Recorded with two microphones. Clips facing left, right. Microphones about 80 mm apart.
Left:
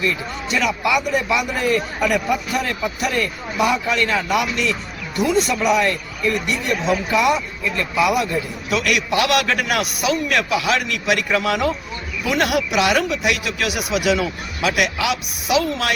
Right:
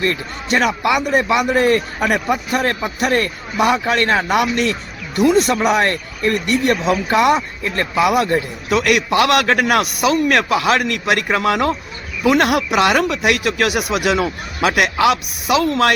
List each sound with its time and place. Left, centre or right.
0.0 s speech: right